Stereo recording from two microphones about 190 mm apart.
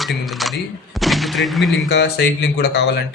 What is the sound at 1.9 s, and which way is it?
Speech, 60° left (ahead or behind).